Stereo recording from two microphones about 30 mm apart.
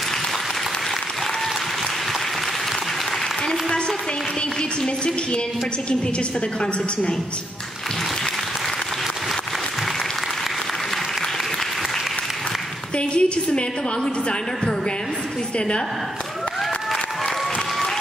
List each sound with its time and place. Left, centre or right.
4.8 s a woman's voice: left
12.9 s a woman's voice: left